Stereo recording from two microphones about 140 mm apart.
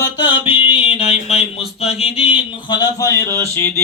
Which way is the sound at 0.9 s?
45° left (ahead or behind).